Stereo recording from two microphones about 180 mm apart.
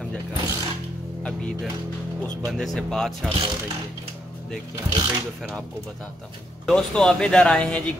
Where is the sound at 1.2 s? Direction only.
5° left (ahead or behind).